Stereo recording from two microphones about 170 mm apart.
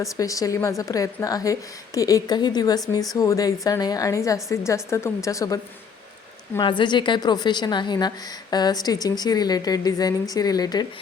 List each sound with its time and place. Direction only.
0.0 s a woman's voice: 20° left (ahead or behind)
6.6 s a woman's voice: 30° left (ahead or behind)